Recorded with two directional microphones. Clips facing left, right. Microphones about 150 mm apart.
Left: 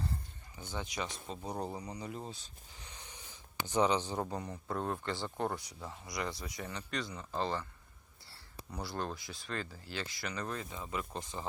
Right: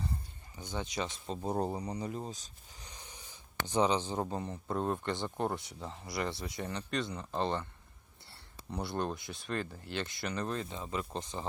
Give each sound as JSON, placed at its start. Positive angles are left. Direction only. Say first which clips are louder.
{"t": 0.6, "sound": "speech", "louder": "right 3 dB", "side_deg": -20}
{"t": 2.3, "sound": "a sound", "louder": "right 2 dB", "side_deg": -40}
{"t": 3.7, "sound": "speech", "louder": "right 1 dB", "side_deg": -20}
{"t": 8.7, "sound": "speech", "louder": "right 4 dB", "side_deg": -25}